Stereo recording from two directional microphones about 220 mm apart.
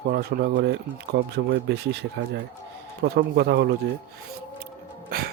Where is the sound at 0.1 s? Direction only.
45° right (ahead or behind).